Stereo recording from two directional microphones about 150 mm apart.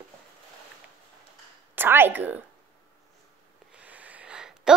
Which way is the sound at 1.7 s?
15° right (ahead or behind).